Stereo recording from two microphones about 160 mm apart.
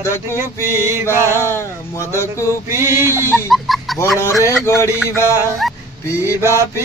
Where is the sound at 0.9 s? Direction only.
15° right (ahead or behind).